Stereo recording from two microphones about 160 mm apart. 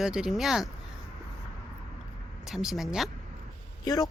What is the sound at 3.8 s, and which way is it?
Speech, 20° left (ahead or behind).